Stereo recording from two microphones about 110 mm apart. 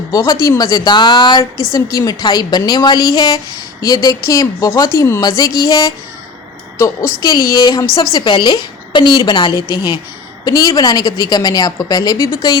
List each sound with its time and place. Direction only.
0.1 s a woman's voice: 35° left (ahead or behind)
1.4 s a woman's voice: 30° left (ahead or behind)
5.4 s a woman's voice: 35° left (ahead or behind)
6.7 s a woman's voice: 25° left (ahead or behind)
7.3 s a woman's voice: 35° left (ahead or behind)